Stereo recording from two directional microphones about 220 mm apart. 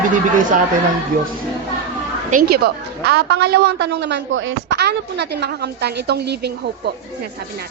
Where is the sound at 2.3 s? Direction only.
40° right (ahead or behind).